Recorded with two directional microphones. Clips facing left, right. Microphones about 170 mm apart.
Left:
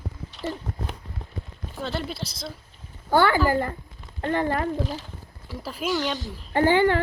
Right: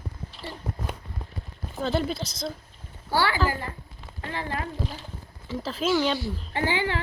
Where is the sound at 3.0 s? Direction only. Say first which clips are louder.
Left 5 dB; 50° left (ahead or behind).